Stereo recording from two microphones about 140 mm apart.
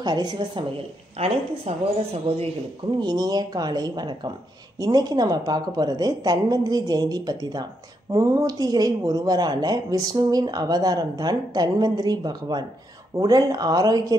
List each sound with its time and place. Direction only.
0.0 s a woman's voice: 30° right (ahead or behind)
1.2 s speech: 45° right (ahead or behind)
3.0 s speech: 30° right (ahead or behind)